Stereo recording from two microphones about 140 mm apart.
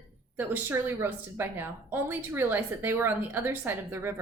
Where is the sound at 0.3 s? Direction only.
15° right (ahead or behind).